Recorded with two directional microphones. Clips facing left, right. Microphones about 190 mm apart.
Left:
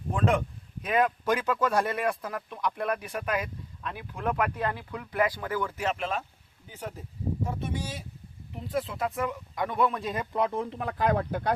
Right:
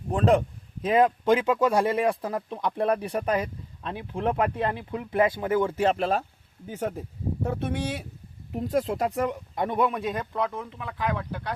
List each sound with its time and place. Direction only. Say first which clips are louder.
0.1 s speech: right 5 dB; 35° right (ahead or behind)
6.7 s speech: right 9 dB; 50° right (ahead or behind)
7.4 s speech: right 9 dB; 65° right (ahead or behind)
8.5 s speech: right 6 dB; 40° right (ahead or behind)
9.6 s a man's voice: right 2 dB; 20° right (ahead or behind)
10.0 s speech: right 3 dB; centre (ahead or behind)
10.3 s speech: left 1 dB; 25° left (ahead or behind)
10.8 s speech: left 3 dB; 45° left (ahead or behind)